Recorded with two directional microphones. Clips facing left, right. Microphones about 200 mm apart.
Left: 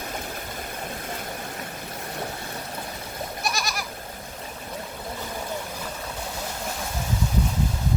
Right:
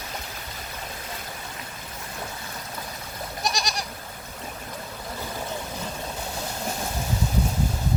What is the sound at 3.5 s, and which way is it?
Goat, 20° right (ahead or behind).